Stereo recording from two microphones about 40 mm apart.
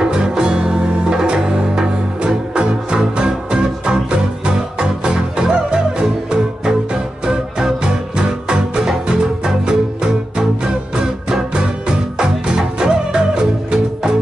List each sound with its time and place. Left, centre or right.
0.0 s music: centre
11.2 s music: centre